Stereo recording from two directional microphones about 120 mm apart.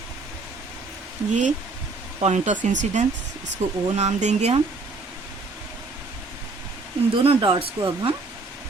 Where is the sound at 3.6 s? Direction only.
60° right (ahead or behind).